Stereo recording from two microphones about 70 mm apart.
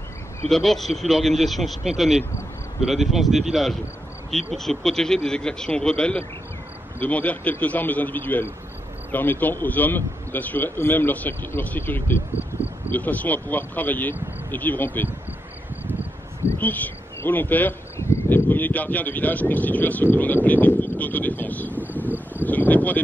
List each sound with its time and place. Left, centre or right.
0.5 s speech: centre; by 12.2 s left
12.9 s speech: left
16.5 s speech: left
17.9 s a sound: left
18.5 s speech: left
21.8 s cricket: right
22.4 s speech: left